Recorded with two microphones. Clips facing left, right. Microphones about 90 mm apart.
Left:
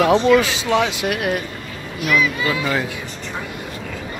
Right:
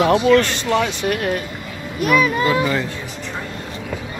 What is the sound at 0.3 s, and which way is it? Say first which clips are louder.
Speech: even; 5° left (ahead or behind).